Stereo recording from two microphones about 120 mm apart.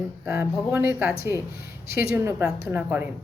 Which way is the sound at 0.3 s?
20° right (ahead or behind).